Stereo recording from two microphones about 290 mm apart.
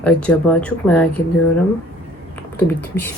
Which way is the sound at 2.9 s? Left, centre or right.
Centre.